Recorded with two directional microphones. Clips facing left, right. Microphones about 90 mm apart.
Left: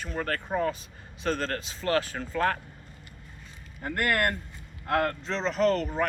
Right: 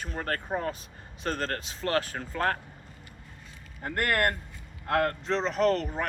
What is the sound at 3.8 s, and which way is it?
Speech, 45° right (ahead or behind).